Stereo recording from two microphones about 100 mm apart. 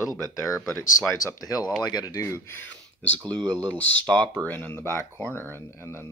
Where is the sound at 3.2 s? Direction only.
45° right (ahead or behind).